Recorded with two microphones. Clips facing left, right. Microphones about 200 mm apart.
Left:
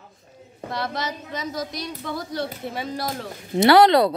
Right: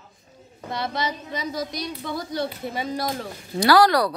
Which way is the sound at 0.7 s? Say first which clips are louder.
Right 1 dB; centre (ahead or behind).